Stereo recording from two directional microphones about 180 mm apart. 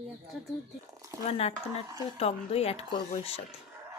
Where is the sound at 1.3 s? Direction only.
35° left (ahead or behind).